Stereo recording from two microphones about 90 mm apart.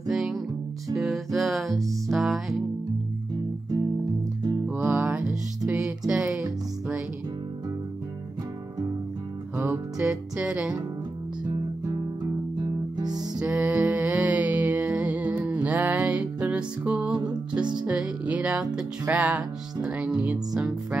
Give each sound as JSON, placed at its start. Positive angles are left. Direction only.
{"t": 0.1, "sound": "music", "side_deg": 0}
{"t": 4.6, "sound": "music", "side_deg": -10}
{"t": 9.9, "sound": "music", "side_deg": -10}
{"t": 13.2, "sound": "music", "side_deg": -15}
{"t": 17.2, "sound": "music", "side_deg": -55}
{"t": 17.8, "sound": "music", "side_deg": -10}